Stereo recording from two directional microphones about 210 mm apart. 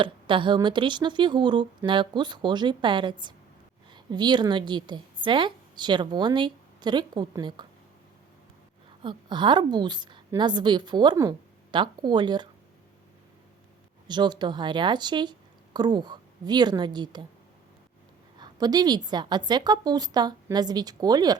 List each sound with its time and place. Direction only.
0.0 s a woman's voice: 25° right (ahead or behind)
9.0 s a woman's voice: 20° right (ahead or behind)
14.1 s a woman's voice: 20° right (ahead or behind)
18.3 s a woman's voice: 20° right (ahead or behind)